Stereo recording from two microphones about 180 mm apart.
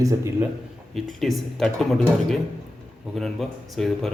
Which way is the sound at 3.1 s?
Centre (ahead or behind).